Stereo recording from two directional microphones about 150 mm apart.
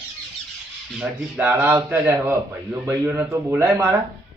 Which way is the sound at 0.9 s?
10° right (ahead or behind).